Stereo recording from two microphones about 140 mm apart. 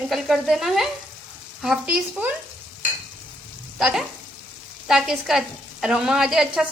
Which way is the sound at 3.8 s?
5° right (ahead or behind).